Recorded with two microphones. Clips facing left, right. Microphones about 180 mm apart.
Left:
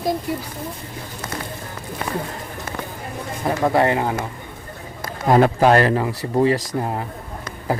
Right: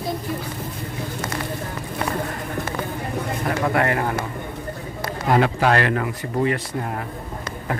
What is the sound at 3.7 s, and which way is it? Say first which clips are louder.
Speech: left 4 dB; 20° left (ahead or behind).